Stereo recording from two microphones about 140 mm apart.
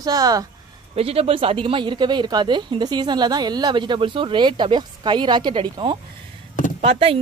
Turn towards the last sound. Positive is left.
turn(degrees=-40)  # may be behind; listen again after turning